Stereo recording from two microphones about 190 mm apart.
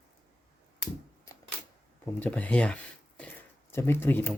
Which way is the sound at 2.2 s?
5° left (ahead or behind).